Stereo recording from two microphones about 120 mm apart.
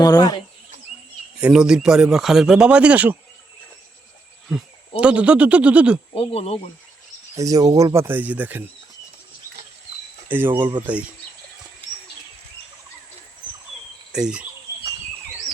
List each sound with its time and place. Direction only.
0.0 s speech: 30° left (ahead or behind)
1.4 s speech: 10° right (ahead or behind)
4.4 s speech: 5° right (ahead or behind)
6.1 s speech: 55° left (ahead or behind)
7.3 s speech: 30° right (ahead or behind)
10.2 s speech: 15° right (ahead or behind)
10.5 s speech: 40° right (ahead or behind)
10.8 s speech: 10° right (ahead or behind)
14.1 s speech: 5° right (ahead or behind)